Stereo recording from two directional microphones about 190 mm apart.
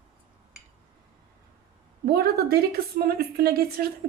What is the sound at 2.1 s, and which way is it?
A woman's voice, 55° right (ahead or behind).